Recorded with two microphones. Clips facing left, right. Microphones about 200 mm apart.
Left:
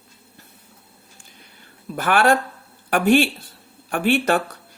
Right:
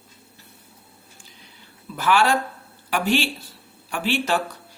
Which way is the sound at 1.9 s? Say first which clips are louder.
Left 2 dB; 55° left (ahead or behind).